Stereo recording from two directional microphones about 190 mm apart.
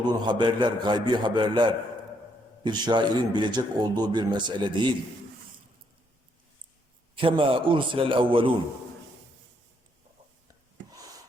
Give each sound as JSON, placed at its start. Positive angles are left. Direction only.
{"t": 0.0, "sound": "speech", "side_deg": -25}
{"t": 7.2, "sound": "speech", "side_deg": -25}